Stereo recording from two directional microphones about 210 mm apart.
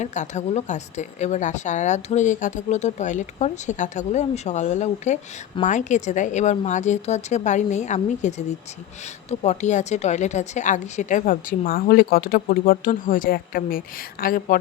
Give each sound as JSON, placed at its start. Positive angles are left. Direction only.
{"t": 0.0, "sound": "a woman's voice", "side_deg": 35}